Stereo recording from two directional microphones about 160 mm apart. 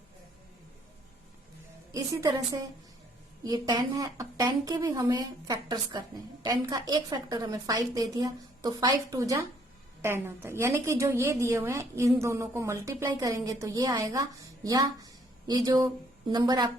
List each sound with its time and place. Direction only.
1.9 s a woman's voice: 20° right (ahead or behind)